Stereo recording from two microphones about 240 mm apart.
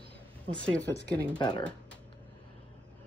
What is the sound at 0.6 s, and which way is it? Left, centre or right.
Speech, centre.